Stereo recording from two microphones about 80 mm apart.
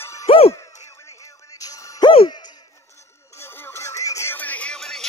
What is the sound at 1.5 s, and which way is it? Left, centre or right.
Music, left.